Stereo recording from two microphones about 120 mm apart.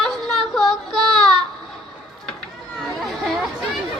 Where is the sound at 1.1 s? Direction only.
5° left (ahead or behind).